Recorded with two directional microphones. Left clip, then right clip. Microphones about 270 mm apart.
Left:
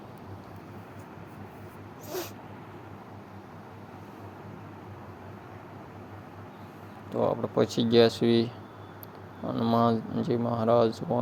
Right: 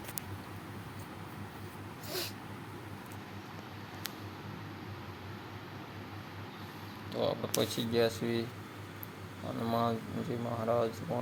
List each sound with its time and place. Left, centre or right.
2.0 s dog: centre
7.1 s speech: left
9.6 s speech: centre